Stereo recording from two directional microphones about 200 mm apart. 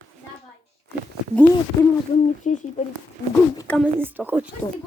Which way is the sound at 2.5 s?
35° left (ahead or behind).